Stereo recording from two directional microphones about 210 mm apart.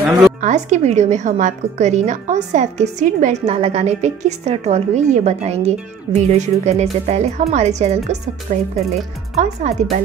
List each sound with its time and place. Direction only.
0.4 s a woman's voice: 35° right (ahead or behind)